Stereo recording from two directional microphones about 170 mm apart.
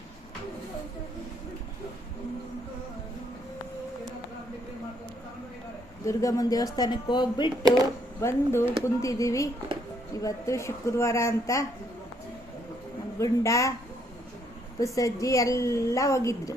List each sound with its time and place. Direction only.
6.1 s a woman's voice: 20° left (ahead or behind)
8.2 s a woman's voice: 15° left (ahead or behind)
13.1 s a woman's voice: 20° left (ahead or behind)
14.8 s a woman's voice: 20° left (ahead or behind)